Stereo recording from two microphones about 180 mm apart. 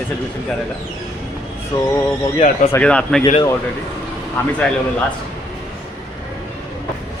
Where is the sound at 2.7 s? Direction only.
5° left (ahead or behind).